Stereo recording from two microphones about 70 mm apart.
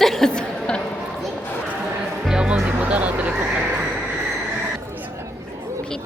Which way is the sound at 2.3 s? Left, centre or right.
Centre.